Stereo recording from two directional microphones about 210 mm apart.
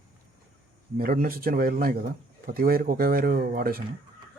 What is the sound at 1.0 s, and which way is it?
Speech, 45° right (ahead or behind).